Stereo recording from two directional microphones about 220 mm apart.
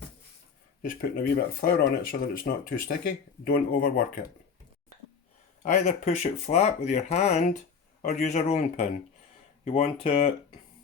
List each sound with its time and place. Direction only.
0.8 s speech: 40° left (ahead or behind)
5.6 s speech: 35° left (ahead or behind)